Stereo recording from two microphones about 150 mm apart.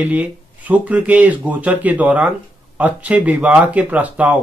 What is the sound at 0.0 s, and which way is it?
Speech, 10° right (ahead or behind).